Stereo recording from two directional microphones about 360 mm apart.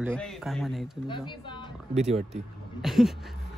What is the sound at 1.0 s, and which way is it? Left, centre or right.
Speech, centre.